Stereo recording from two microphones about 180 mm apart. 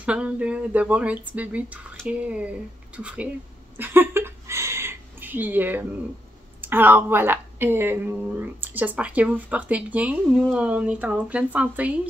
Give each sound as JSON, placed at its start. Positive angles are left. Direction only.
{"t": 0.0, "sound": "a woman's voice", "side_deg": -5}
{"t": 3.7, "sound": "a sound", "side_deg": -10}
{"t": 6.6, "sound": "a woman's voice", "side_deg": -10}